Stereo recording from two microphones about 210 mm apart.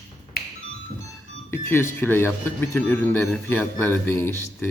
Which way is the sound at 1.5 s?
10° left (ahead or behind).